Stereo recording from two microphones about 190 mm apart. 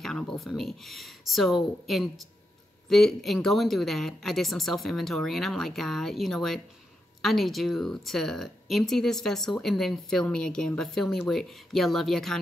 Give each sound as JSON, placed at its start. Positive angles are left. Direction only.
{"t": 0.0, "sound": "speech", "side_deg": 0}